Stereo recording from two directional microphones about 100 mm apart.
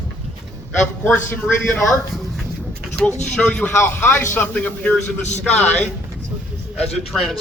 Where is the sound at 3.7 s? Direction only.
25° left (ahead or behind).